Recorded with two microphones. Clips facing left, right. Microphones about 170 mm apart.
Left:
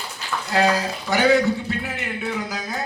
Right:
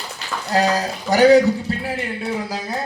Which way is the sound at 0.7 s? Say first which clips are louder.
Right 3 dB; 40° right (ahead or behind).